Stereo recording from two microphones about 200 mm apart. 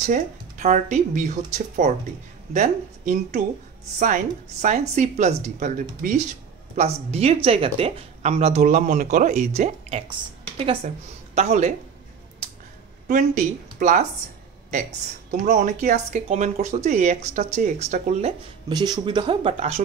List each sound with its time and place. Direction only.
0.0 s speech: 35° right (ahead or behind)
11.3 s speech: 35° right (ahead or behind)
13.1 s speech: 40° right (ahead or behind)
15.3 s speech: 40° right (ahead or behind)
18.7 s speech: 20° right (ahead or behind)